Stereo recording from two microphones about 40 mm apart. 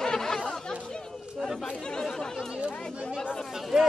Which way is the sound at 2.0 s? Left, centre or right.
Centre.